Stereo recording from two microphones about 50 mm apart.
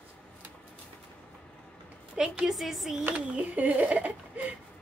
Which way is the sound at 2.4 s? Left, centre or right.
Centre.